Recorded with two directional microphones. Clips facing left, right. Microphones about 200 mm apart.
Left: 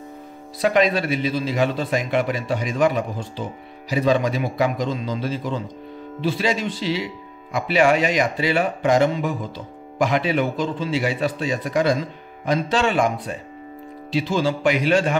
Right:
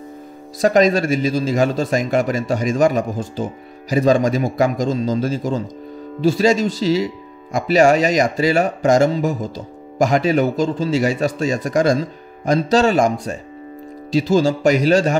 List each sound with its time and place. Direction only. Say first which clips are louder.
0.6 s a man's voice: right 4 dB; 45° right (ahead or behind)